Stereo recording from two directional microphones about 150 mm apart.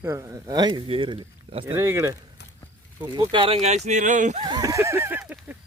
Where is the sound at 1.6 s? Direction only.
15° right (ahead or behind).